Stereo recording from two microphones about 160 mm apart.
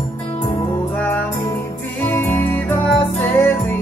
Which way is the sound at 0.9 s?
10° left (ahead or behind).